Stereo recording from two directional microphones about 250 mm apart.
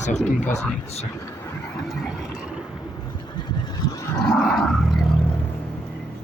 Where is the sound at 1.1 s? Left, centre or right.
Centre.